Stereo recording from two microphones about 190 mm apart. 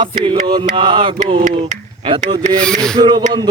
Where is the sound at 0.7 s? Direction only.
25° right (ahead or behind).